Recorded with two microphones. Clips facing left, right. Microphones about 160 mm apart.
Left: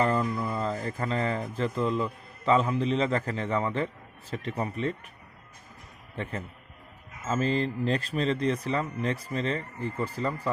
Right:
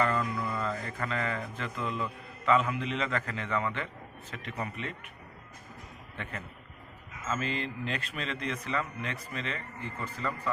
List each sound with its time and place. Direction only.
0.0 s speech: 30° left (ahead or behind)
6.2 s speech: 35° left (ahead or behind)